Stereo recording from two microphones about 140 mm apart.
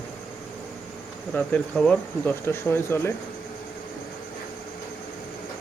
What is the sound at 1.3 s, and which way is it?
Speech, 10° left (ahead or behind).